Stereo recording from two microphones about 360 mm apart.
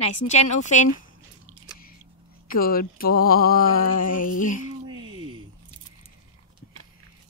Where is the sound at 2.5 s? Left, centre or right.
Left.